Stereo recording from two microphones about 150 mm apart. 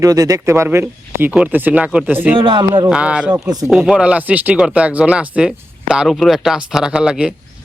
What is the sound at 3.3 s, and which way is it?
Speech, 25° right (ahead or behind).